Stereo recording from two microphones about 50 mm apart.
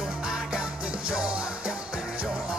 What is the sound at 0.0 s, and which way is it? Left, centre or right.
Music, centre.